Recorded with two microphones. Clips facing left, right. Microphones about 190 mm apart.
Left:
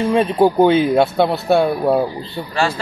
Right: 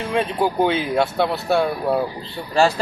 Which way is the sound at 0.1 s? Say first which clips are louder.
Left 5 dB; 30° left (ahead or behind).